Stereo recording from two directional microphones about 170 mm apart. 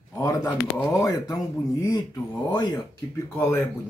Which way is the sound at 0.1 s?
20° left (ahead or behind).